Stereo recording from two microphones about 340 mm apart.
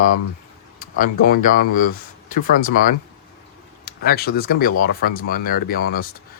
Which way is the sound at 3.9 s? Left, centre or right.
Left.